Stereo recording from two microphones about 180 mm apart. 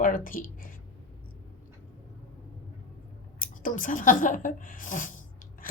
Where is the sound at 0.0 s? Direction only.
50° left (ahead or behind).